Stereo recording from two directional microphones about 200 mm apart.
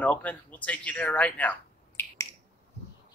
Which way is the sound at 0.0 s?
5° left (ahead or behind).